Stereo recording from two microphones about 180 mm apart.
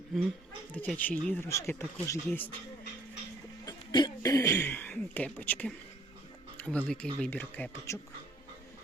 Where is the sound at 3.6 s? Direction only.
20° left (ahead or behind).